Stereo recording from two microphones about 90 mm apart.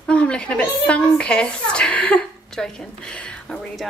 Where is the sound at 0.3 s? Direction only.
10° left (ahead or behind).